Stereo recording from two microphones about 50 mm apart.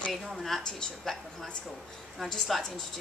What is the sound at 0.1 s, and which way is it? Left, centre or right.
Speech, centre.